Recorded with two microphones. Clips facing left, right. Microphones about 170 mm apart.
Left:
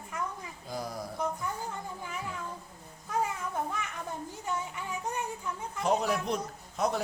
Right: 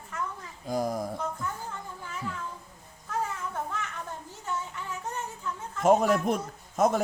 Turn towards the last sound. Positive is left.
turn(degrees=-50)  # may be behind; listen again after turning